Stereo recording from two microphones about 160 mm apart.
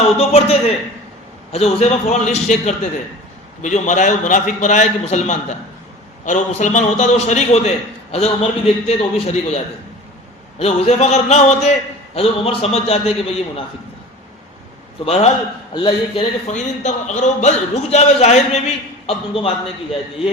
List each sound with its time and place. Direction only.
0.2 s a man's voice: 40° left (ahead or behind)
10.6 s a man's voice: 40° left (ahead or behind)
15.0 s a man's voice: 40° left (ahead or behind)
16.5 s a man's voice: 45° left (ahead or behind)